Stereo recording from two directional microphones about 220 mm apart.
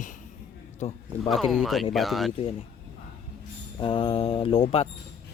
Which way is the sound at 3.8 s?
25° left (ahead or behind).